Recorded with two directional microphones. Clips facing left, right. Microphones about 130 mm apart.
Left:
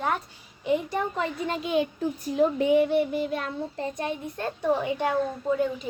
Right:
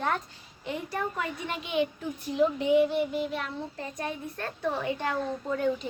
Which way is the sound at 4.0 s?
20° left (ahead or behind).